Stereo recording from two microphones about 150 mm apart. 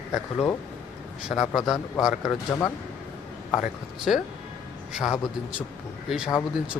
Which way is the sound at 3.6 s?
Centre (ahead or behind).